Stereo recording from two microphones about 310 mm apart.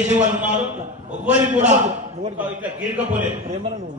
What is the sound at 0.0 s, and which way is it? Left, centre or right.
Speech, right.